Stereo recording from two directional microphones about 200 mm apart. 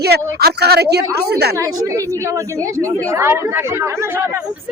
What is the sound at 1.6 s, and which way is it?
Speech, 15° right (ahead or behind).